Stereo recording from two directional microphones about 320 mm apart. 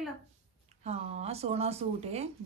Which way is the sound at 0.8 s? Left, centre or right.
Centre.